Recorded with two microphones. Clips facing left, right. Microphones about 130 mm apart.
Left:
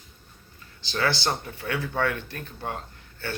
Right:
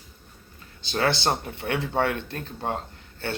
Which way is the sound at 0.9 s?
25° right (ahead or behind).